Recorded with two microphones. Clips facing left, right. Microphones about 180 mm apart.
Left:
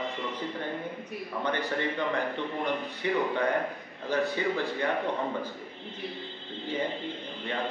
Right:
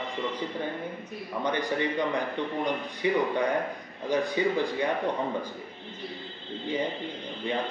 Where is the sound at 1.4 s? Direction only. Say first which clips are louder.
Right 2 dB; 15° right (ahead or behind).